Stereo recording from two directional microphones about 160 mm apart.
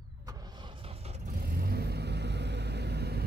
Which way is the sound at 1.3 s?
70° right (ahead or behind).